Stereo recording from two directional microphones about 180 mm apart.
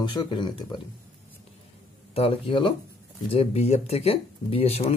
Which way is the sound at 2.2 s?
30° left (ahead or behind).